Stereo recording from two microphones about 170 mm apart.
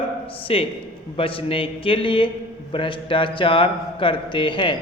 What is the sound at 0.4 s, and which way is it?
A man's voice, 35° left (ahead or behind).